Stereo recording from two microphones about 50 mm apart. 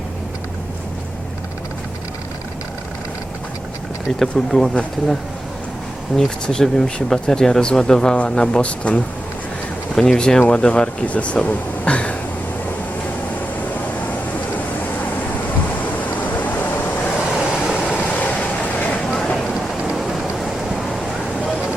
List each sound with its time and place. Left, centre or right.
4.2 s speech: centre
6.1 s speech: centre
9.9 s speech: centre
16.0 s vehicle: left
18.9 s a sound: centre
19.4 s a sound: centre
19.8 s rain: centre